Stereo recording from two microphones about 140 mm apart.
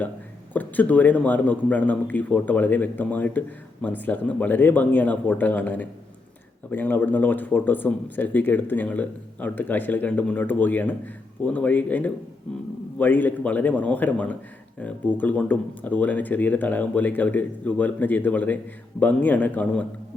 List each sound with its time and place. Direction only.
0.5 s a man's voice: 10° left (ahead or behind)